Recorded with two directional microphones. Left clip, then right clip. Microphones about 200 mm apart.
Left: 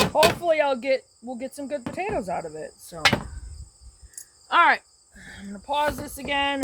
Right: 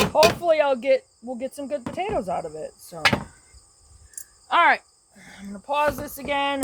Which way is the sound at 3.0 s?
10° left (ahead or behind).